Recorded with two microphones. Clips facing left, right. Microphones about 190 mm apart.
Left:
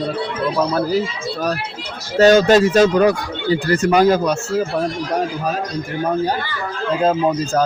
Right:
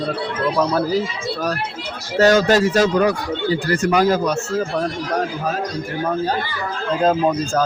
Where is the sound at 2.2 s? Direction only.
25° left (ahead or behind).